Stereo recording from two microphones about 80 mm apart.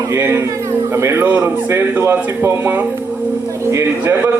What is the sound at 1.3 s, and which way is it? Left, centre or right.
A man's voice, right.